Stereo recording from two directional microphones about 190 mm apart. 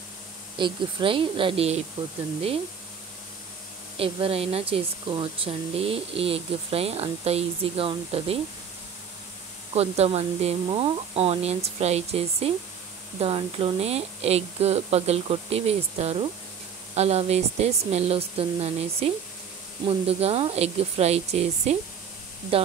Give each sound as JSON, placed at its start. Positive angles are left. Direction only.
{"t": 0.6, "sound": "speech", "side_deg": -25}
{"t": 3.9, "sound": "speech", "side_deg": -30}
{"t": 9.8, "sound": "speech", "side_deg": -35}